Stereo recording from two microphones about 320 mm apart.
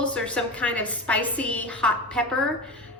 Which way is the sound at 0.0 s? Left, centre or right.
Centre.